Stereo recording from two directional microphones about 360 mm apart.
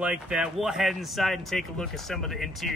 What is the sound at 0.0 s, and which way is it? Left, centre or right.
Speech, centre.